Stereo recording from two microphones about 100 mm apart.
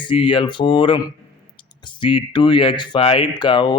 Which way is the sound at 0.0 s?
55° left (ahead or behind).